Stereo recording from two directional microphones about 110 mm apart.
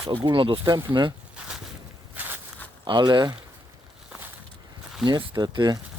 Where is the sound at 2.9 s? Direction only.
45° right (ahead or behind).